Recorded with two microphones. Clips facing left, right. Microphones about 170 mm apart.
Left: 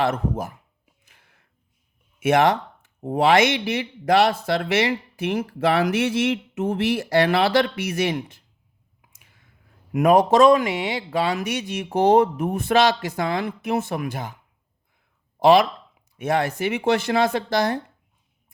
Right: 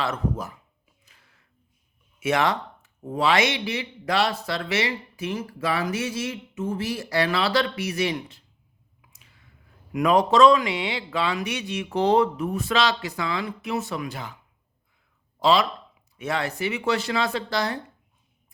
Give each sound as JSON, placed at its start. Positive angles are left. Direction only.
{"t": 0.0, "sound": "speech", "side_deg": 55}
{"t": 1.2, "sound": "a sound", "side_deg": 60}
{"t": 2.2, "sound": "speech", "side_deg": 50}
{"t": 9.0, "sound": "clicking", "side_deg": 50}
{"t": 9.9, "sound": "speech", "side_deg": 50}
{"t": 15.4, "sound": "speech", "side_deg": 55}